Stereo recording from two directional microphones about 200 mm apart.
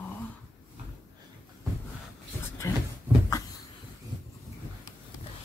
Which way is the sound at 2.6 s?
15° left (ahead or behind).